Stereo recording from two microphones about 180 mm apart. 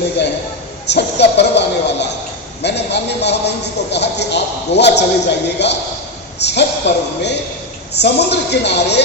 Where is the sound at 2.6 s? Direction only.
70° left (ahead or behind).